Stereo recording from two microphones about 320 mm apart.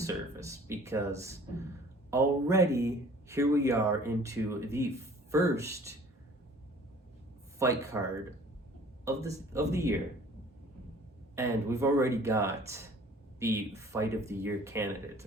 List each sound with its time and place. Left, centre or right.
0.0 s speech: centre
7.6 s speech: centre
11.3 s speech: centre